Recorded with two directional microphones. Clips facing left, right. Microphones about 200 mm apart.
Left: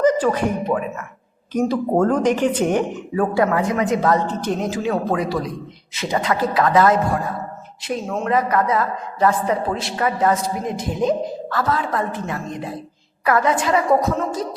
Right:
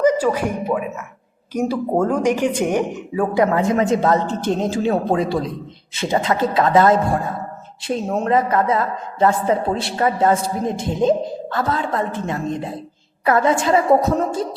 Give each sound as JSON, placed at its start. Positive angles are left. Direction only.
{"t": 0.0, "sound": "speech", "side_deg": -10}